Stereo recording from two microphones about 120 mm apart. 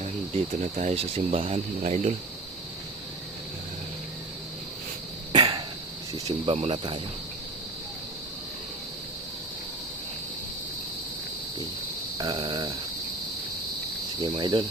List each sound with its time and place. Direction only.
0.8 s speech: 60° right (ahead or behind)
1.8 s speech: 75° right (ahead or behind)
5.3 s cough: 40° right (ahead or behind)
6.4 s speech: 50° right (ahead or behind)
12.1 s a sound: 40° right (ahead or behind)
14.2 s speech: 40° right (ahead or behind)